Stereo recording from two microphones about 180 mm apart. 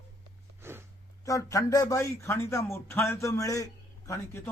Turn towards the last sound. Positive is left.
turn(degrees=15)  # may be behind; listen again after turning